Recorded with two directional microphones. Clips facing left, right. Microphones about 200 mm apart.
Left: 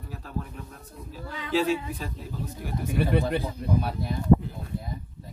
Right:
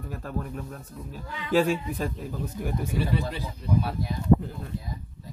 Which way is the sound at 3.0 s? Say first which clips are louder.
Left 6 dB; 55° left (ahead or behind).